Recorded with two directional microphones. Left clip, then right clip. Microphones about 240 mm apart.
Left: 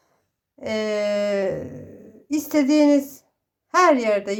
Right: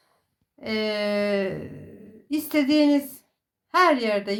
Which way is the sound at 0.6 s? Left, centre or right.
Left.